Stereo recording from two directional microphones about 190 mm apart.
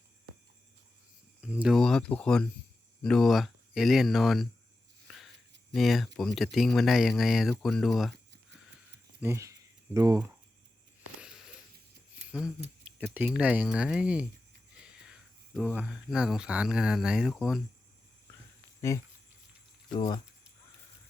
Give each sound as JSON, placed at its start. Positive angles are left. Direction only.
{"t": 1.4, "sound": "speech", "side_deg": -5}
{"t": 5.0, "sound": "a sound", "side_deg": 0}
{"t": 5.7, "sound": "speech", "side_deg": 0}
{"t": 9.2, "sound": "speech", "side_deg": -15}
{"t": 11.2, "sound": "a sound", "side_deg": -5}
{"t": 13.1, "sound": "speech", "side_deg": -5}
{"t": 18.8, "sound": "speech", "side_deg": 15}